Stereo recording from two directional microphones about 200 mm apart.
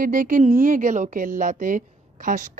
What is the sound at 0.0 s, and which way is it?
A woman's voice, 40° right (ahead or behind).